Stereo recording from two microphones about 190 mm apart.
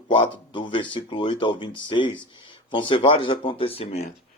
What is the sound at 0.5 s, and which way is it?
Speech, 25° left (ahead or behind).